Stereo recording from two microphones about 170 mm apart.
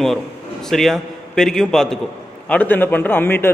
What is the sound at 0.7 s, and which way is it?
A man's voice, centre (ahead or behind).